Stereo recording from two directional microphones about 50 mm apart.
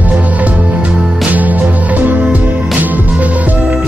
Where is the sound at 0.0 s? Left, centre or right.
Right.